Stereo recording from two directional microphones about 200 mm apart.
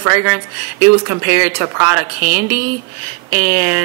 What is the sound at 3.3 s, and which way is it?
Speech, 10° right (ahead or behind).